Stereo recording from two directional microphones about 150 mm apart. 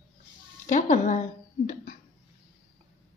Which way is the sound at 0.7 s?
55° left (ahead or behind).